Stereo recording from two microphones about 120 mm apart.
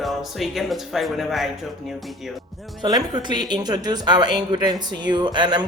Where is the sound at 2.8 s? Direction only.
35° right (ahead or behind).